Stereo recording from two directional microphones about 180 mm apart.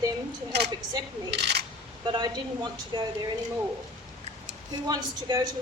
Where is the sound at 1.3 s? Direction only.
65° right (ahead or behind).